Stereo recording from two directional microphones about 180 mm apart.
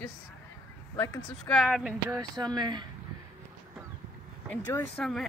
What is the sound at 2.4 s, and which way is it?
Speech, 25° right (ahead or behind).